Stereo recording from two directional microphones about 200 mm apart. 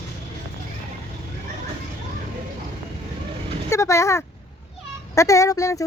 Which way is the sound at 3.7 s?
15° left (ahead or behind).